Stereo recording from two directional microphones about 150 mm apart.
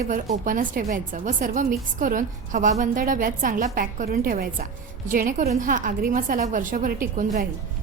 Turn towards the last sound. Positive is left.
turn(degrees=-60)  # may be behind; listen again after turning